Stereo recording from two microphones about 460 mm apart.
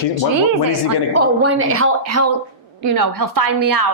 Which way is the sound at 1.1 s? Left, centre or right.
Right.